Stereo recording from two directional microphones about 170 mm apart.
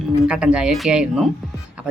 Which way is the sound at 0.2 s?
5° right (ahead or behind).